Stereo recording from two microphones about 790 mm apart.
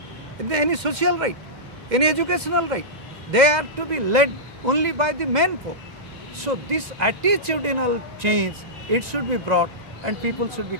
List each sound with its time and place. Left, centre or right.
0.5 s a man's voice: right